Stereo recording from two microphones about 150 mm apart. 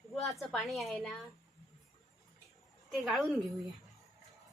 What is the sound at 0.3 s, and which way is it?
Speech, centre (ahead or behind).